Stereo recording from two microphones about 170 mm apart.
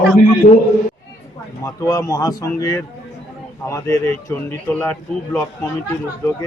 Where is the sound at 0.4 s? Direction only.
45° left (ahead or behind).